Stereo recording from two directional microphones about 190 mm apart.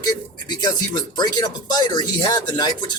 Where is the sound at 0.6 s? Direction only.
20° left (ahead or behind).